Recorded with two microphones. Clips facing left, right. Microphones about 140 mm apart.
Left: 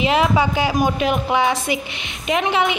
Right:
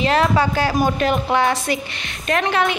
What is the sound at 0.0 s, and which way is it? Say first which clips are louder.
A woman's voice: even; 10° left (ahead or behind).